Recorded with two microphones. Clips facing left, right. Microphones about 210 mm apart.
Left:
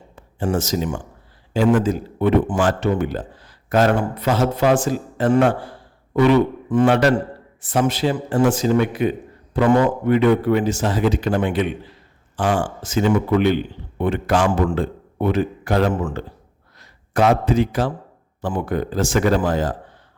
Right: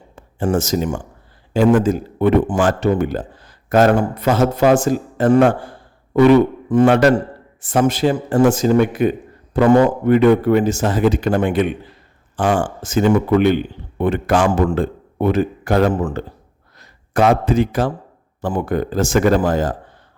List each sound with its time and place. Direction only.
0.2 s a man's voice: 50° right (ahead or behind); by 16.2 s 35° right (ahead or behind)
16.7 s a man's voice: 50° right (ahead or behind)